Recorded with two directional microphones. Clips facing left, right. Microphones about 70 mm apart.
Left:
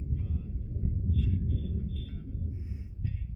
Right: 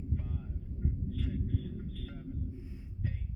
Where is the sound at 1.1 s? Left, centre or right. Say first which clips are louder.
Left 3 dB; right.